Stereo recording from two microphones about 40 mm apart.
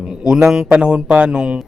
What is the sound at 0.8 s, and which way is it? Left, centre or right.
Speech, right.